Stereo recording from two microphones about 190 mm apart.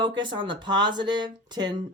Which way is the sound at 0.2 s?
25° right (ahead or behind).